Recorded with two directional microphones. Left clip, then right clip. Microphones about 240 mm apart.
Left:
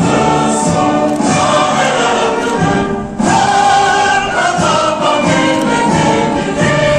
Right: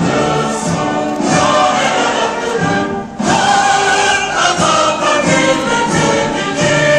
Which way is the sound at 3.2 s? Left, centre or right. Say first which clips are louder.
Left 2 dB; centre.